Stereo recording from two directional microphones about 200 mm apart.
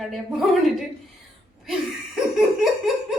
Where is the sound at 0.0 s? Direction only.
Centre (ahead or behind).